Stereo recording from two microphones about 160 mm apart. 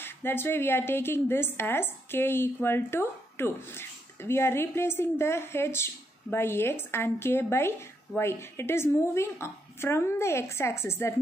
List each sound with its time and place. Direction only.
0.0 s a woman's voice: 15° left (ahead or behind)